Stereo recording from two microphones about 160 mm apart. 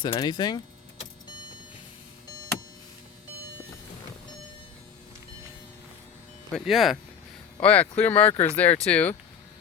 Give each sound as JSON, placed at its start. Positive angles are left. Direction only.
{"t": 0.0, "sound": "speech", "side_deg": 30}
{"t": 6.5, "sound": "speech", "side_deg": 0}